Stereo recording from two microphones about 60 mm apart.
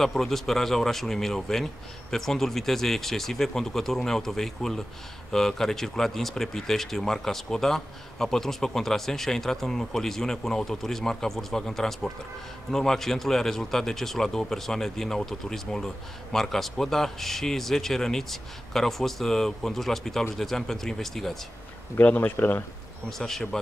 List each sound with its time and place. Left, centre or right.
0.0 s speech: centre
21.9 s speech: left
23.0 s speech: centre